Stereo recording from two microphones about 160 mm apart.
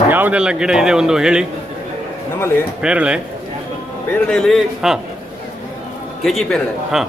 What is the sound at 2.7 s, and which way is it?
Speech, 5° right (ahead or behind).